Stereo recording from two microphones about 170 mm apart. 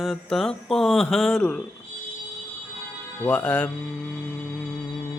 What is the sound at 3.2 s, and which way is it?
Speech, 10° left (ahead or behind).